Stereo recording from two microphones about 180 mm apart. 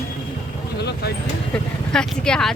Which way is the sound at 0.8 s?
65° left (ahead or behind).